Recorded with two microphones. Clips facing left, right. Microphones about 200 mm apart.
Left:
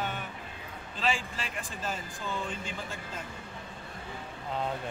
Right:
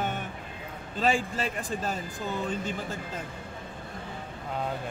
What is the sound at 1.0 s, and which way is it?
A man's voice, 45° right (ahead or behind).